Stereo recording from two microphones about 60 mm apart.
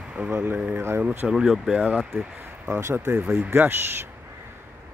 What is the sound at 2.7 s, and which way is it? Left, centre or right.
Speech, right.